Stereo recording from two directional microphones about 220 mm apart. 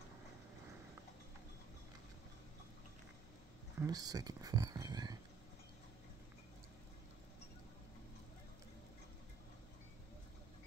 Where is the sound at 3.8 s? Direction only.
15° right (ahead or behind).